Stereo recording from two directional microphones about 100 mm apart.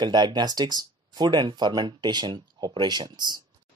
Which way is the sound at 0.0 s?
45° right (ahead or behind).